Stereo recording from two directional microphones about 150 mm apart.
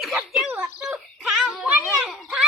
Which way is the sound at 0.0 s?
Centre (ahead or behind).